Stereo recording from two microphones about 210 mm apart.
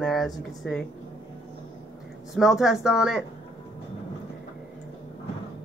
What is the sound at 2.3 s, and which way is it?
Speech, centre (ahead or behind).